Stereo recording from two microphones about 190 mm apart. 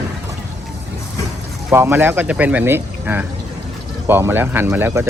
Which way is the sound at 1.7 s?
10° right (ahead or behind).